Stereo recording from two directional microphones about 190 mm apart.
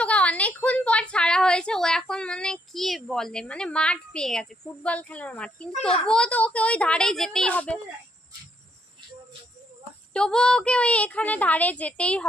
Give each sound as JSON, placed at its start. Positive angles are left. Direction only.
{"t": 0.0, "sound": "a woman's voice", "side_deg": 5}
{"t": 5.7, "sound": "a child's voice", "side_deg": 30}
{"t": 6.0, "sound": "a woman's voice", "side_deg": 5}
{"t": 10.1, "sound": "a woman's voice", "side_deg": 5}